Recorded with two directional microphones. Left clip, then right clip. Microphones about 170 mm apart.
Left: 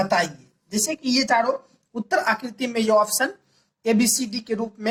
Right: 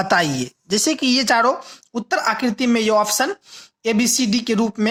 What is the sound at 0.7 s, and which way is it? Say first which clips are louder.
Speech: right 6 dB; 40° right (ahead or behind).